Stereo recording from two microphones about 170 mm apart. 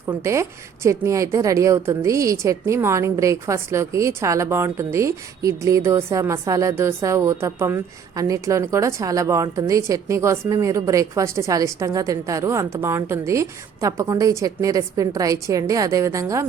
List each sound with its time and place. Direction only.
0.0 s a woman's voice: 15° right (ahead or behind)